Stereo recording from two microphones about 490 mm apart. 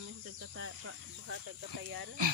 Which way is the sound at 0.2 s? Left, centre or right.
Right.